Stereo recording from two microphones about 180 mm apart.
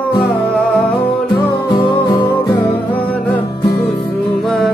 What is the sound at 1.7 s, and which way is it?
Music, 25° left (ahead or behind).